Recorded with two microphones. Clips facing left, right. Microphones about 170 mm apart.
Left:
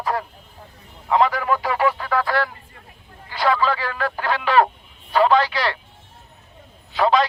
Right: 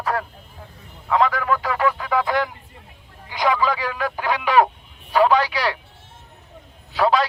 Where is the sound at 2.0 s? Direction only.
10° right (ahead or behind).